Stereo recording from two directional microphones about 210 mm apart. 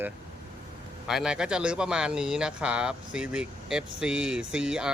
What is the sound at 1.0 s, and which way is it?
A man's voice, 5° right (ahead or behind).